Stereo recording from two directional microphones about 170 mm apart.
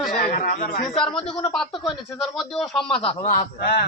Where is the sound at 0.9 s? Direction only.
5° left (ahead or behind).